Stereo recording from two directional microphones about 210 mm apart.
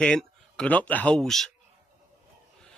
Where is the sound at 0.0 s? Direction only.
5° left (ahead or behind).